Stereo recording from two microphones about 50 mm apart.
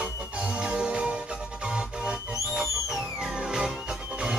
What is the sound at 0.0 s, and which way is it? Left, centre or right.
Music, right.